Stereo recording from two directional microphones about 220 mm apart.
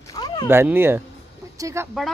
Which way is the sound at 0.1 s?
20° left (ahead or behind).